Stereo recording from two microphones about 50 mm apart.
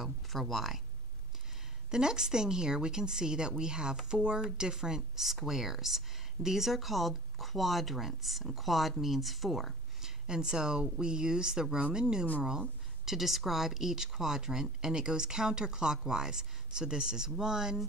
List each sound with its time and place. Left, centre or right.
0.0 s speech: centre
1.9 s speech: centre
10.0 s speech: centre